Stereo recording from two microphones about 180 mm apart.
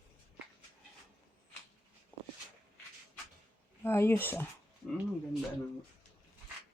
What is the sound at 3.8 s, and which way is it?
Speech, 15° left (ahead or behind).